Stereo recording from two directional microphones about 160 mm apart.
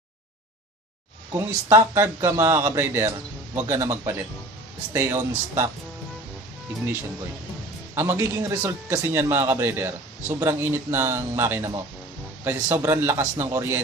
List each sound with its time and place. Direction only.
1.3 s a man's voice: 15° right (ahead or behind)
7.9 s a man's voice: 15° right (ahead or behind)